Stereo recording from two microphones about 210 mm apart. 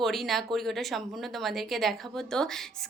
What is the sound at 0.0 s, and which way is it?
A woman's voice, centre (ahead or behind).